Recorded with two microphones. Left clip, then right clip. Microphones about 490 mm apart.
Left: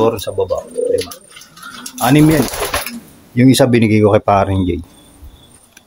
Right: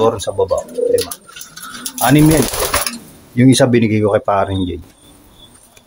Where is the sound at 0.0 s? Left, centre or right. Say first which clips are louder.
Right 1 dB; left.